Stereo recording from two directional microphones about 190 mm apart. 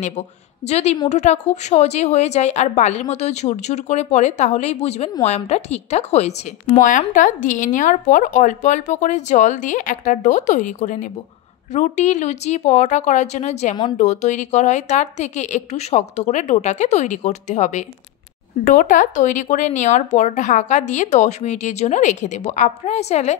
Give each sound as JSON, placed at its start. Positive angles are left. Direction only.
{"t": 0.7, "sound": "a woman's voice", "side_deg": 35}